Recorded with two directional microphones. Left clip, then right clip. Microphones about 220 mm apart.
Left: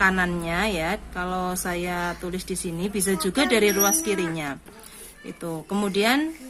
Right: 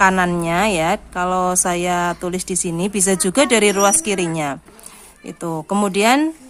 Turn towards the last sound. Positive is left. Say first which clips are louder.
# right 7 dB
turn(degrees=-40)  # may be behind; listen again after turning